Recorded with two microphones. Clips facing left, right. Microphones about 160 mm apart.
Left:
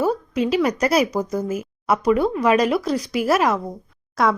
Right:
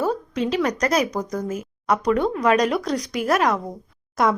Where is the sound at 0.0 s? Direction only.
10° left (ahead or behind).